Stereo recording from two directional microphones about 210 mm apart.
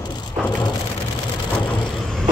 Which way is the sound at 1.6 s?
5° left (ahead or behind).